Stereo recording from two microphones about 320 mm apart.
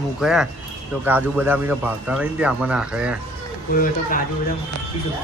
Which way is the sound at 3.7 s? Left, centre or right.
Left.